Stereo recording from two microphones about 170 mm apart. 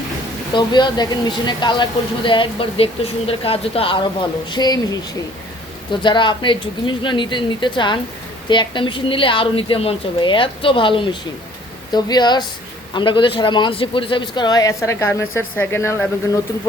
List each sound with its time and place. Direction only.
0.5 s a woman's voice: 25° left (ahead or behind)